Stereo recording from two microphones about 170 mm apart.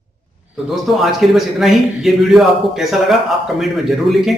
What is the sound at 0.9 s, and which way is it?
A man's voice, centre (ahead or behind).